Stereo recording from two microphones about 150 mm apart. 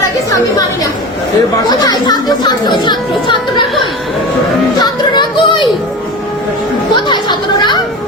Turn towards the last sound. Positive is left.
turn(degrees=30)  # may be behind; listen again after turning